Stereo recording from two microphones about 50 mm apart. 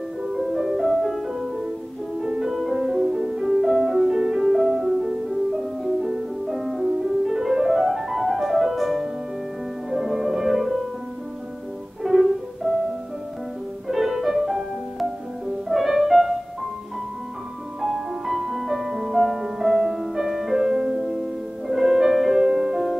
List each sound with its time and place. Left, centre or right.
0.3 s music: centre
2.5 s music: centre
12.0 s music: centre
13.8 s music: centre
17.8 s music: centre
22.3 s music: centre